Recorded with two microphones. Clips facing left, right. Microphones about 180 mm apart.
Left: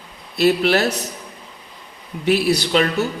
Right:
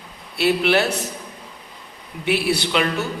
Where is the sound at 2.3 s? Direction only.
40° left (ahead or behind).